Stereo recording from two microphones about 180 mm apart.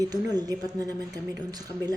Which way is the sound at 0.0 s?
20° right (ahead or behind).